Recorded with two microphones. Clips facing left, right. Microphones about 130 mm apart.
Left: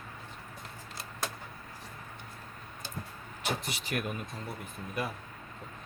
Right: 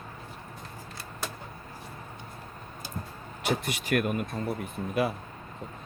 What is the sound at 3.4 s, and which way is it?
Speech, 60° right (ahead or behind).